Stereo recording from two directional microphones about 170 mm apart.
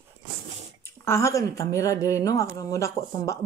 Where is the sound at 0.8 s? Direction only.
15° left (ahead or behind).